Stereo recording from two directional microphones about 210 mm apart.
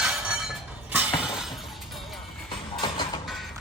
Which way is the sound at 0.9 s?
5° right (ahead or behind).